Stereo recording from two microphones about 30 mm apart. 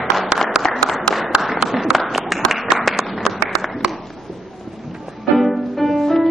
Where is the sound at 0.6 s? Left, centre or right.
Centre.